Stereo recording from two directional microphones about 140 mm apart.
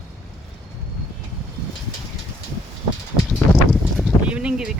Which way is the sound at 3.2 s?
Centre (ahead or behind).